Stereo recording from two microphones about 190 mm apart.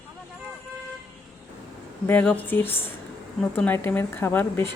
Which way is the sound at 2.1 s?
10° left (ahead or behind).